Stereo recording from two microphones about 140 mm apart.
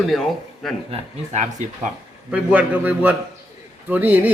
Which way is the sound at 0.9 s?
55° right (ahead or behind).